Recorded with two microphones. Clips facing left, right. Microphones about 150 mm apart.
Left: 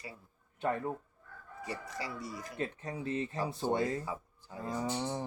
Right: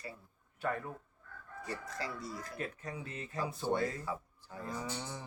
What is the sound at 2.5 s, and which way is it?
Fowl, 25° left (ahead or behind).